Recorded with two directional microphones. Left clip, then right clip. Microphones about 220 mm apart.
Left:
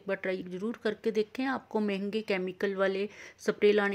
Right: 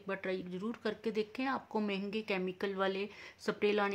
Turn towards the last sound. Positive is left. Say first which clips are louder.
# left 7 dB
turn(degrees=20)  # may be behind; listen again after turning